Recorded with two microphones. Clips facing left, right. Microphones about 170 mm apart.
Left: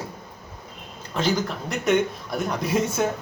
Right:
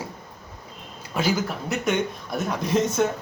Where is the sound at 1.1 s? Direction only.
10° right (ahead or behind).